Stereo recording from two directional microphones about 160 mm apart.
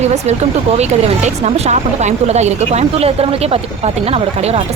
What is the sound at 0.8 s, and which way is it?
Speech, 45° right (ahead or behind).